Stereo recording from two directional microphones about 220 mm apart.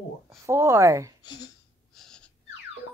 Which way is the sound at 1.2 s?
20° left (ahead or behind).